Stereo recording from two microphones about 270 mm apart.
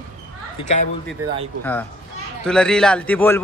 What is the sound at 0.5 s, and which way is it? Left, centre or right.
Speech, left.